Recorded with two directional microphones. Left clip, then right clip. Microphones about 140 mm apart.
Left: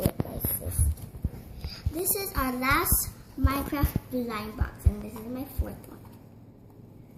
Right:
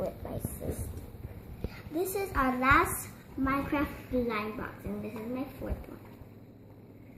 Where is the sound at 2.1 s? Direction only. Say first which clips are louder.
Right 2 dB; 5° right (ahead or behind).